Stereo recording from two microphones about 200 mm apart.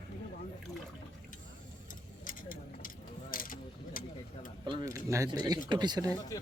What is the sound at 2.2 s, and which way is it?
Vehicle, 45° left (ahead or behind).